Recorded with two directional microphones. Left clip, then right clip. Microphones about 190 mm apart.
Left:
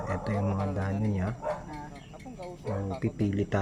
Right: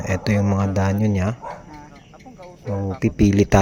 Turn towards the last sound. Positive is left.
turn(degrees=-40)  # may be behind; listen again after turning